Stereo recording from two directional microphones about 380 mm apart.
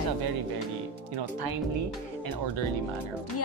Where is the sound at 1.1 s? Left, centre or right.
Right.